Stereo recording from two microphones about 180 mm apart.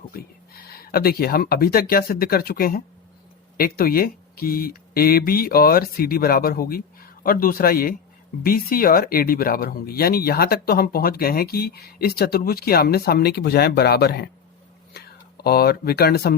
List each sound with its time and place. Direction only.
0.1 s speech: 55° left (ahead or behind)
15.4 s speech: 60° left (ahead or behind)